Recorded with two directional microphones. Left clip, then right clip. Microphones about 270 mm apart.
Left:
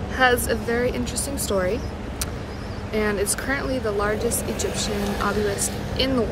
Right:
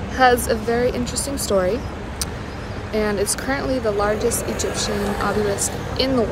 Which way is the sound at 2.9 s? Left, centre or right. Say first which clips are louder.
Right 2 dB; centre.